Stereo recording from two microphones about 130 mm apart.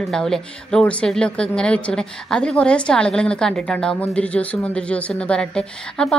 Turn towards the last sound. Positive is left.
turn(degrees=5)  # may be behind; listen again after turning